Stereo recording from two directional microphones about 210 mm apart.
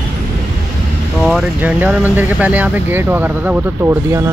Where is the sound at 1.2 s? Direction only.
5° right (ahead or behind).